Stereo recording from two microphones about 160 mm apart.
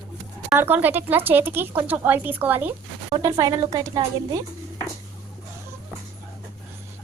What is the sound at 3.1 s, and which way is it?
A woman's voice, 25° right (ahead or behind).